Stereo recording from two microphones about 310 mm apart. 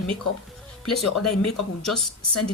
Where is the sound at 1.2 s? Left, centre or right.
Left.